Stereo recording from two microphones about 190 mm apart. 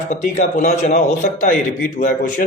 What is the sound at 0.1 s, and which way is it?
Speech, 40° left (ahead or behind).